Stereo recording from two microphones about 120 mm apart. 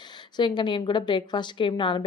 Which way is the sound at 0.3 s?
40° left (ahead or behind).